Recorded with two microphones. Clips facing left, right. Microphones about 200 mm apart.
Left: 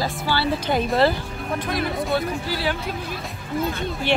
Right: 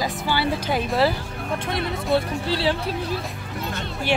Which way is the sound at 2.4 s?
30° right (ahead or behind).